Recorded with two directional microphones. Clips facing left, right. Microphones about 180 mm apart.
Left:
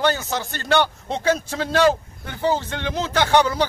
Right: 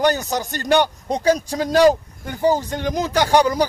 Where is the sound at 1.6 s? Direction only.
15° right (ahead or behind).